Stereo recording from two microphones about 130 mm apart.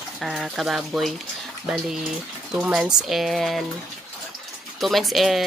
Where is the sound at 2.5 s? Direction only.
5° right (ahead or behind).